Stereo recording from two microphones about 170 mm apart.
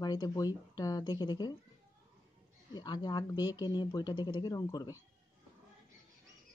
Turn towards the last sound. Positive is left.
turn(degrees=20)  # may be behind; listen again after turning